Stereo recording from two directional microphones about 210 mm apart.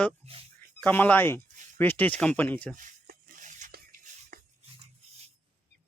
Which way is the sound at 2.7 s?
40° right (ahead or behind).